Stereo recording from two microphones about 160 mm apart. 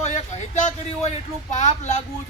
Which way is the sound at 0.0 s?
45° left (ahead or behind).